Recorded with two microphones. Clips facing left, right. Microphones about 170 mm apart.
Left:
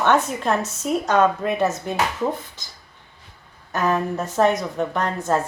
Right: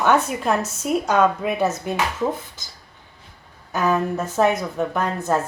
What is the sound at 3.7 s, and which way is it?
A woman's voice, centre (ahead or behind).